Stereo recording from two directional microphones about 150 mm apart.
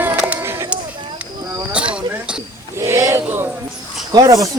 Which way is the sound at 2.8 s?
15° right (ahead or behind).